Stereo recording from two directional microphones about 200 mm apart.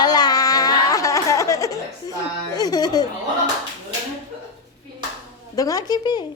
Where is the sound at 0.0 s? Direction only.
20° left (ahead or behind).